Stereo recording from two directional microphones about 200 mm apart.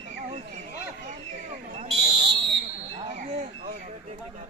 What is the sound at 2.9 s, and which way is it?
Squawk, 35° right (ahead or behind).